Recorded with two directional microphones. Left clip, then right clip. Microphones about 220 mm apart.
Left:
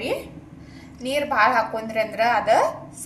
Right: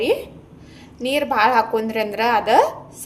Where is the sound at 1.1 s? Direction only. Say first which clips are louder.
Right 2 dB; 45° right (ahead or behind).